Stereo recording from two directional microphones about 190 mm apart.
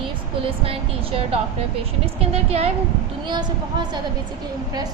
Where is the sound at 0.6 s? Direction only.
30° right (ahead or behind).